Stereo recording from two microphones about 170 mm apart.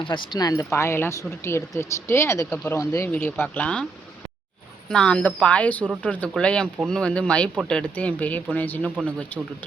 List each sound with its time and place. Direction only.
0.0 s speech: 30° left (ahead or behind)
3.1 s speech: 10° left (ahead or behind)
4.9 s speech: 5° left (ahead or behind)